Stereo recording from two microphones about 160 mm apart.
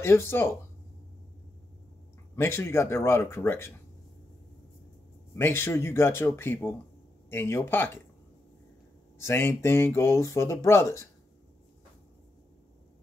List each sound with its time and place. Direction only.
0.0 s speech: 15° left (ahead or behind)
2.3 s speech: 15° left (ahead or behind)
5.3 s speech: 15° left (ahead or behind)
9.2 s speech: 15° left (ahead or behind)